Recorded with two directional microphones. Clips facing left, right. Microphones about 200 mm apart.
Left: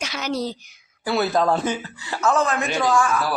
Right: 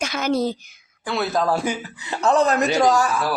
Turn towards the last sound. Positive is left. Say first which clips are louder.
# right 2 dB
turn(degrees=-40)  # may be behind; listen again after turning